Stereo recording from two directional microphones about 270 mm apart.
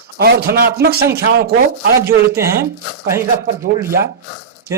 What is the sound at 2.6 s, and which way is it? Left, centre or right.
Speech, centre.